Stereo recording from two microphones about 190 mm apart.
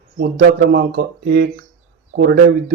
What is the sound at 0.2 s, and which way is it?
Speech, 60° right (ahead or behind).